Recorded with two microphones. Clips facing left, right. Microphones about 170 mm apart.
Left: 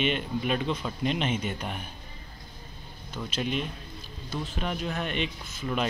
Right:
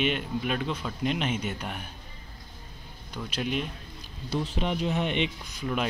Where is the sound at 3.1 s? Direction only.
10° right (ahead or behind).